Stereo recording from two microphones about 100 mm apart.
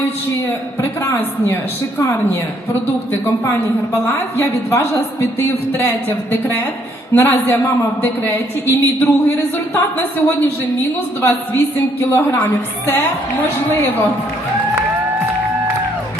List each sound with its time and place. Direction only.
0.4 s a woman's voice: 30° left (ahead or behind)
3.9 s a woman's voice: 25° left (ahead or behind)